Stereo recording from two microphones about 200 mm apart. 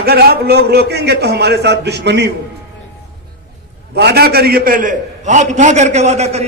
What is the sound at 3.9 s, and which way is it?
A man's voice, 55° right (ahead or behind).